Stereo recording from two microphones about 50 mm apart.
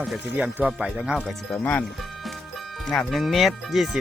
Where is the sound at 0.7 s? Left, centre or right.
Centre.